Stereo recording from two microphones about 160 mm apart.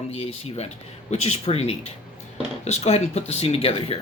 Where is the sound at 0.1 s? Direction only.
40° left (ahead or behind).